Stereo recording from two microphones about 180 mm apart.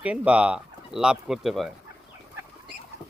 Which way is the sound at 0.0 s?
5° right (ahead or behind).